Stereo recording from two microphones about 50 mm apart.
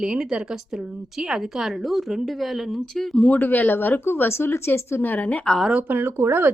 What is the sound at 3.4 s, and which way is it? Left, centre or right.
Speech, left.